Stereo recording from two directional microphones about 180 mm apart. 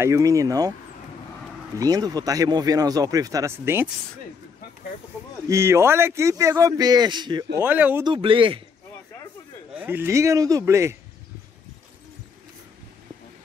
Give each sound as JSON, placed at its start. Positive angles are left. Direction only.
{"t": 0.0, "sound": "speech", "side_deg": -15}
{"t": 1.8, "sound": "speech", "side_deg": -20}
{"t": 5.5, "sound": "speech", "side_deg": -15}
{"t": 7.5, "sound": "speech", "side_deg": -10}
{"t": 8.0, "sound": "speech", "side_deg": -30}
{"t": 9.8, "sound": "speech", "side_deg": -10}